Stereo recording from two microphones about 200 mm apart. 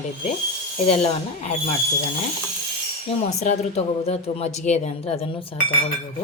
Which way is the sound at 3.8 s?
30° left (ahead or behind).